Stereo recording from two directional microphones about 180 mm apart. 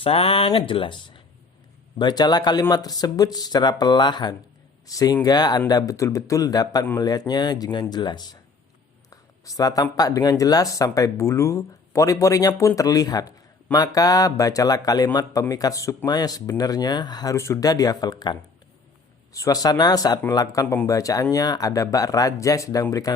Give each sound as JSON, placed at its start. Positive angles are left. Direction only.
{"t": 0.0, "sound": "speech", "side_deg": 30}